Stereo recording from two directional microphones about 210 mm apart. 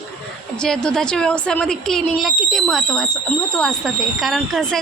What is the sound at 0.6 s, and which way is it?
Speech, 5° left (ahead or behind).